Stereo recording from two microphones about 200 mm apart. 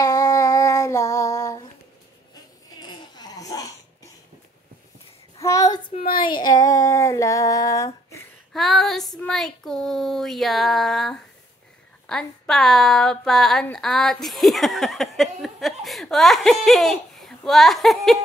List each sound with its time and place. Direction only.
0.0 s female singing: 20° left (ahead or behind)
2.8 s a sound: 20° left (ahead or behind)
5.4 s child singing: 15° left (ahead or behind)
5.9 s speech: 45° left (ahead or behind)
6.2 s a sound: 20° left (ahead or behind)
8.5 s female singing: centre (ahead or behind)
9.2 s a woman's voice: centre (ahead or behind)